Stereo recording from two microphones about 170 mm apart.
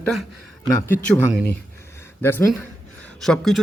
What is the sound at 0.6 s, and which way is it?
Speech, 15° left (ahead or behind).